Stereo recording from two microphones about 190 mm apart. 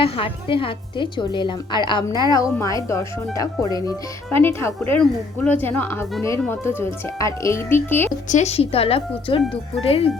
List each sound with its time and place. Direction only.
0.0 s a woman's voice: 30° left (ahead or behind); by 8.1 s 10° left (ahead or behind)
8.3 s a woman's voice: 35° left (ahead or behind)
9.4 s speech: centre (ahead or behind)
9.8 s a woman's voice: 30° left (ahead or behind)